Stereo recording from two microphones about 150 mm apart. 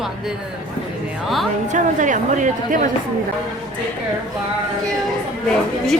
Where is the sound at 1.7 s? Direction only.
55° right (ahead or behind).